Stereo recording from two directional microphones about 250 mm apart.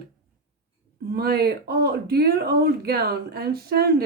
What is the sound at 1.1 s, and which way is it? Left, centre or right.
Speech, right.